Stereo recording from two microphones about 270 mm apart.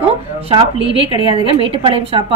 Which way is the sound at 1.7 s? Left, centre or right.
Centre.